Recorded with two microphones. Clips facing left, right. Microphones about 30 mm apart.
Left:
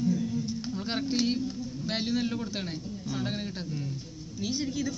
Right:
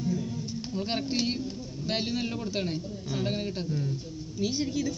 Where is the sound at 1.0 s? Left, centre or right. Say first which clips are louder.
Left 2 dB; right.